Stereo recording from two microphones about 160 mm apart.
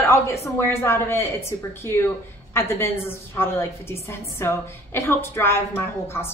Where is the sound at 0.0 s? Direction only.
15° left (ahead or behind).